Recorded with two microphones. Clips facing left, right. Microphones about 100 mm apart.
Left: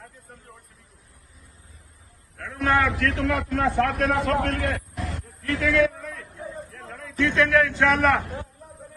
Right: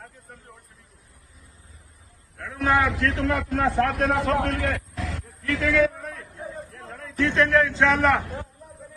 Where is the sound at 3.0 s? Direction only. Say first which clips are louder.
Even; 30° right (ahead or behind).